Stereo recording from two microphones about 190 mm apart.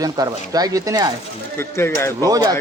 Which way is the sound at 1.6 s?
10° left (ahead or behind).